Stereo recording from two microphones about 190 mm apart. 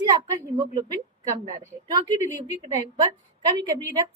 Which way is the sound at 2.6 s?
20° right (ahead or behind).